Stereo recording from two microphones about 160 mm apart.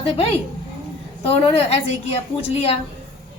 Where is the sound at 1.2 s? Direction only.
35° left (ahead or behind).